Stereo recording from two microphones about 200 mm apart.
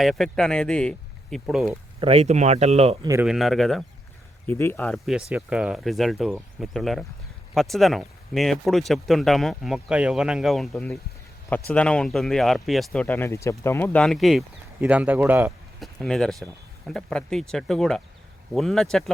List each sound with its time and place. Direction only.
0.0 s speech: centre (ahead or behind)
2.0 s speech: 30° right (ahead or behind)
3.1 s speech: 5° right (ahead or behind)
16.0 s speech: 5° left (ahead or behind)